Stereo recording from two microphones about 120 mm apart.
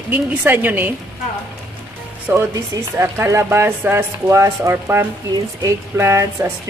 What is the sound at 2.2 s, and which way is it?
Speech, 25° right (ahead or behind).